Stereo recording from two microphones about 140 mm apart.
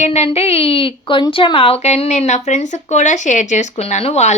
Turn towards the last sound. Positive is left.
turn(degrees=55)  # may be behind; listen again after turning